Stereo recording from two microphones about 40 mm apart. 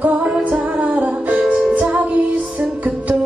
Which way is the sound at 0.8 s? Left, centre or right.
Right.